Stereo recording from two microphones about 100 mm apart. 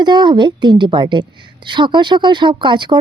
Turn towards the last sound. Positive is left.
turn(degrees=-50)  # may be behind; listen again after turning